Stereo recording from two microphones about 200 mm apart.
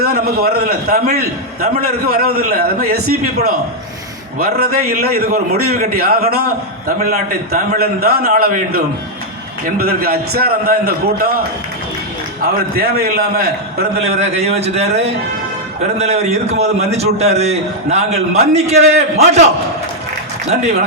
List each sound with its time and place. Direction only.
0.0 s a man's voice: 50° right (ahead or behind)
12.7 s a man's voice: 50° right (ahead or behind)
14.0 s a man's voice: 35° right (ahead or behind)
20.5 s a man's voice: 35° right (ahead or behind)